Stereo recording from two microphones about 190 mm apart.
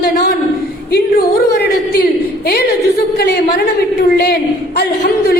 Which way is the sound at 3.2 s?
60° left (ahead or behind).